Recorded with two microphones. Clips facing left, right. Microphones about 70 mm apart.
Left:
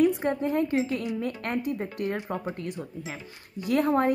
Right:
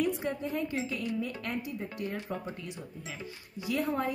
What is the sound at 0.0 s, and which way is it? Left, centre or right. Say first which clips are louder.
A woman's voice: left 8 dB; left.